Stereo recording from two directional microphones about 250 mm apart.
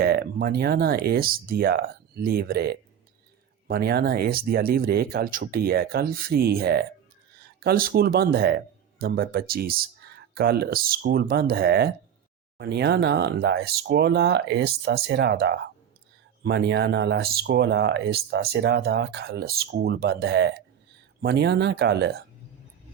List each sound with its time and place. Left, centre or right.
0.0 s speech: right